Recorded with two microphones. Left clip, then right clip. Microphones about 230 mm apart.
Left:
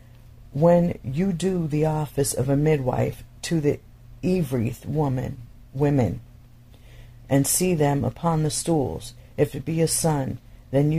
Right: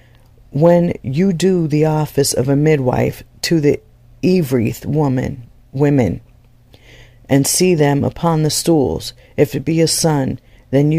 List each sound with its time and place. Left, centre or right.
0.6 s speech: right